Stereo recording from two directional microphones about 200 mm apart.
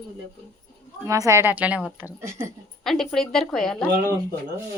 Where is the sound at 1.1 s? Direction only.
15° right (ahead or behind); by 3.7 s centre (ahead or behind).